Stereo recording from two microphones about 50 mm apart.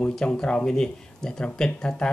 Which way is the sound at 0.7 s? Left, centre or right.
Centre.